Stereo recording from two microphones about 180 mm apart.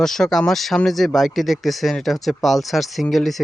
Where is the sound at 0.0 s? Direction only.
Centre (ahead or behind).